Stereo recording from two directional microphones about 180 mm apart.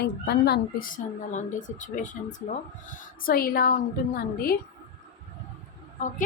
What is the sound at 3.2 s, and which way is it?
A woman's voice, 55° left (ahead or behind).